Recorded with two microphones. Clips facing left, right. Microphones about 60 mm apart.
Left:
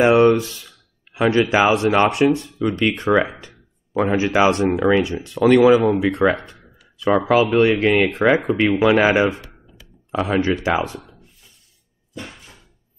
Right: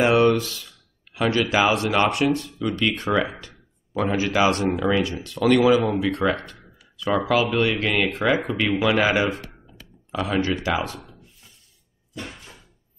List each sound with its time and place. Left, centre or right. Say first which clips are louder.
0.0 s speech: left 4 dB; centre
3.3 s a sound: even; left
4.2 s speech: left 3 dB; left
10.2 s speech: left 4 dB; left